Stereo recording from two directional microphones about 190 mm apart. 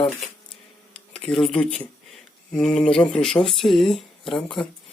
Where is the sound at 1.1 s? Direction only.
Centre (ahead or behind).